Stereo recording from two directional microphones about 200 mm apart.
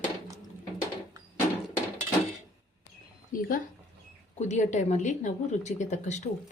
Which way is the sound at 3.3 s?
45° left (ahead or behind).